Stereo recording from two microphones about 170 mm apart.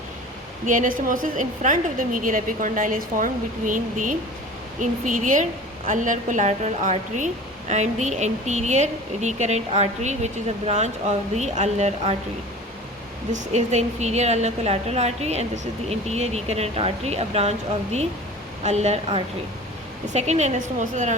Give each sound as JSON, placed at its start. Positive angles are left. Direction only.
{"t": 0.7, "sound": "a woman's voice", "side_deg": -50}
{"t": 13.5, "sound": "a woman's voice", "side_deg": -40}
{"t": 18.6, "sound": "a woman's voice", "side_deg": -40}